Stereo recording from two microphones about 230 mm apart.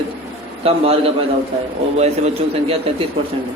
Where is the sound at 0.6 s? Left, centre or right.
Right.